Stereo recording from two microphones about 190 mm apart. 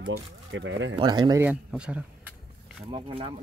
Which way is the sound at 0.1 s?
75° right (ahead or behind).